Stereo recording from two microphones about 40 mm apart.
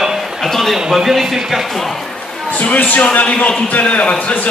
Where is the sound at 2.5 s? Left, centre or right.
Left.